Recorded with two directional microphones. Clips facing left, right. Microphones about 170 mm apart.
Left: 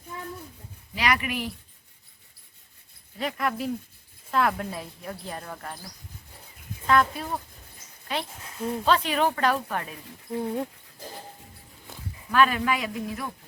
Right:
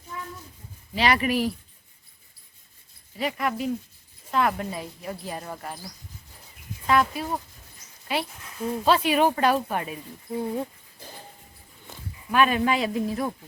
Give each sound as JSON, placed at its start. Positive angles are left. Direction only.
{"t": 0.9, "sound": "speech", "side_deg": -30}
{"t": 3.2, "sound": "speech", "side_deg": -5}
{"t": 10.3, "sound": "speech", "side_deg": 0}
{"t": 12.3, "sound": "speech", "side_deg": -20}